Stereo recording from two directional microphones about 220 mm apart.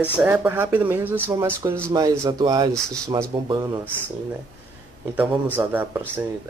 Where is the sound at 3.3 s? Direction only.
20° right (ahead or behind).